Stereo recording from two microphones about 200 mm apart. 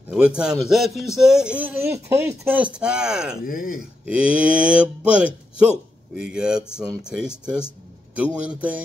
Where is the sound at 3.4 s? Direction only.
45° left (ahead or behind).